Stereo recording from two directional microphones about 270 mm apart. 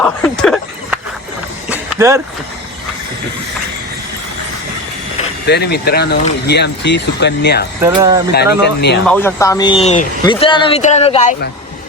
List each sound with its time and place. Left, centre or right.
0.0 s a sound: centre
1.7 s vehicle: centre
5.5 s speech: left
7.8 s speech: centre
8.3 s speech: left
9.0 s speech: centre; by 11.3 s left